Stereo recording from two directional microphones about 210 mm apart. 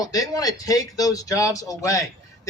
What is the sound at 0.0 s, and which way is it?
Speech, 15° left (ahead or behind).